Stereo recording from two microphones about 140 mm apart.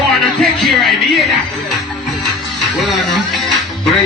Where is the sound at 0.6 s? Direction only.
Centre (ahead or behind).